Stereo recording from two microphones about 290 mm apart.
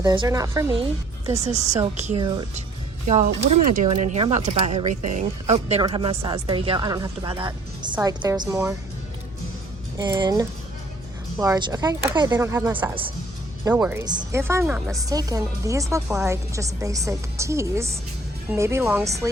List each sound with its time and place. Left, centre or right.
0.0 s speech: centre
1.7 s speech: right
10.0 s speech: centre